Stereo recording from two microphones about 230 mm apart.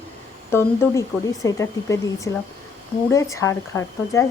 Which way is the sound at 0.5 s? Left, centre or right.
Centre.